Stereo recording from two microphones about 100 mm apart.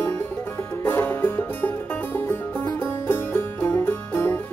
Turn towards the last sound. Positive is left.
turn(degrees=20)  # may be behind; listen again after turning